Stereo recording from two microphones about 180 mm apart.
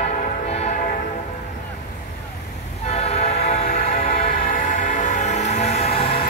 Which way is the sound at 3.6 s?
55° left (ahead or behind).